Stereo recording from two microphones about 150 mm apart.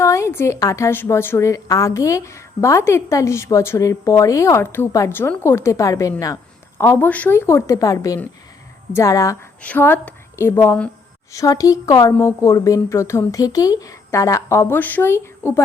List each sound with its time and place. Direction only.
0.0 s a woman's voice: 20° left (ahead or behind)
9.6 s a woman's voice: 10° left (ahead or behind)